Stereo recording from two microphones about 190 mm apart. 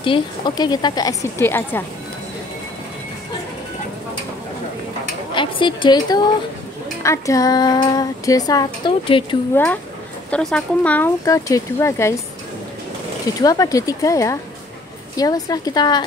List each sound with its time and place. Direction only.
0.0 s speech: 25° left (ahead or behind)
5.3 s a woman's voice: 25° left (ahead or behind)
10.3 s speech: 5° left (ahead or behind)
13.4 s speech: 20° left (ahead or behind)